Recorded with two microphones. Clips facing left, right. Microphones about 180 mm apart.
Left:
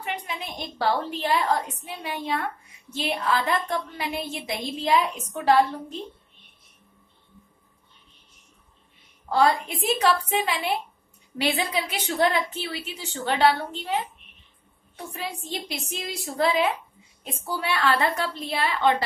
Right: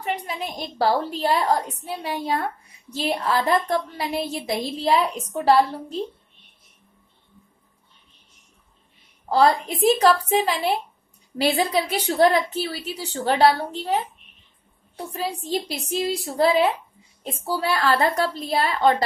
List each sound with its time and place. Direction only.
0.0 s a woman's voice: 35° right (ahead or behind)
9.3 s a woman's voice: 35° right (ahead or behind)
15.0 s a woman's voice: 35° right (ahead or behind)